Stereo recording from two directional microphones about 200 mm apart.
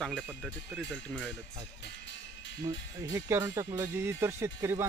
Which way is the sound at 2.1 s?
65° left (ahead or behind).